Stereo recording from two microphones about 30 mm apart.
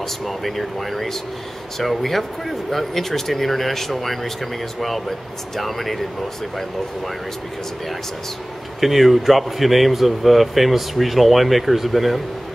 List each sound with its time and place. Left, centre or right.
0.4 s speech: centre
8.8 s speech: centre